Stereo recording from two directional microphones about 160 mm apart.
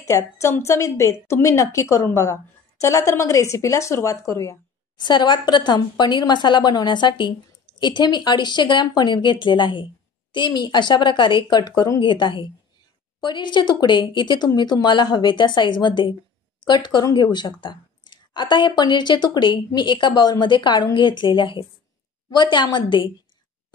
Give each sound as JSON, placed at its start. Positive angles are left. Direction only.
{"t": 0.0, "sound": "speech", "side_deg": 20}